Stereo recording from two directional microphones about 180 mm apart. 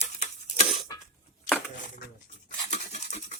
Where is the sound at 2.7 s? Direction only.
40° left (ahead or behind).